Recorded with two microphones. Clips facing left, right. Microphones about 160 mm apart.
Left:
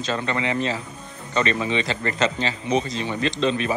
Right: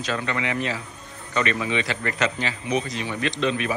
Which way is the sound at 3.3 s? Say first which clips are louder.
Left 2 dB; 25° left (ahead or behind).